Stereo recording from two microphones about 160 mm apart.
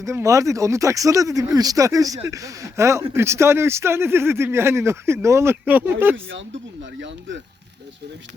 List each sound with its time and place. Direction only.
0.0 s speech: 20° right (ahead or behind)